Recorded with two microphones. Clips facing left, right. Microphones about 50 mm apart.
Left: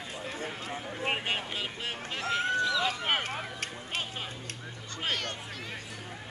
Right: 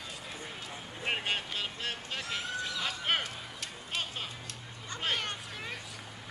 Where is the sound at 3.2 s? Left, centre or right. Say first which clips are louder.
Left 6 dB; left.